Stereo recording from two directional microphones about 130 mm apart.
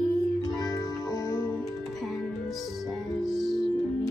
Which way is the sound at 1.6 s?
Centre (ahead or behind).